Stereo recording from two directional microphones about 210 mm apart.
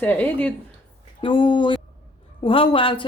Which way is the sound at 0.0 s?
10° left (ahead or behind).